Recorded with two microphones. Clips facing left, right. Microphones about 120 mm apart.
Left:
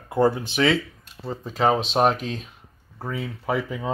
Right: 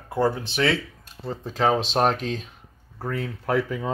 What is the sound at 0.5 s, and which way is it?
Speech, 20° left (ahead or behind).